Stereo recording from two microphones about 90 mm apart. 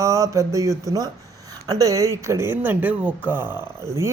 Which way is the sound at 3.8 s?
30° right (ahead or behind).